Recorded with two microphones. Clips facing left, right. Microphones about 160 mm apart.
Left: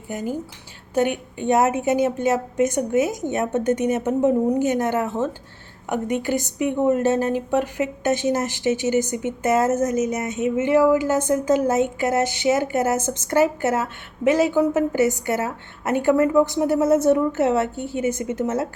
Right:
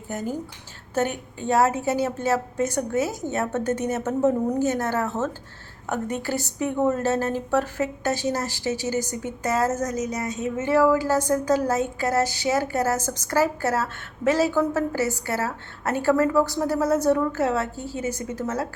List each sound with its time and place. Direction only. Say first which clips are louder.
0.1 s a woman's voice: left 2 dB; 10° left (ahead or behind)
1.4 s a woman's voice: left 2 dB; 20° left (ahead or behind)